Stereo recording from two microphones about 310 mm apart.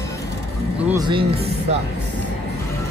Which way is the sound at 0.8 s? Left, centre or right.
Centre.